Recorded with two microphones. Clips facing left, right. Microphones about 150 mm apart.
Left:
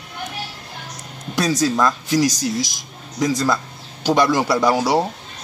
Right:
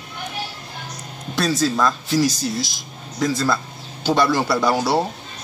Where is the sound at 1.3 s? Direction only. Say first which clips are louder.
Left 1 dB; 15° left (ahead or behind).